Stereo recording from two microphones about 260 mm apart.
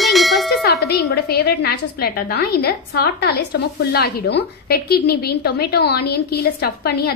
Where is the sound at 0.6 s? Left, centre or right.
Left.